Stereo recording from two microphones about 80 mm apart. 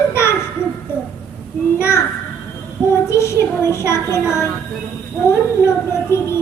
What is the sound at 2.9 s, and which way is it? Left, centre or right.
Child singing, left.